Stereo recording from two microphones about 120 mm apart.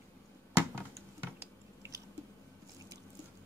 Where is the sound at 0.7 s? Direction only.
20° right (ahead or behind).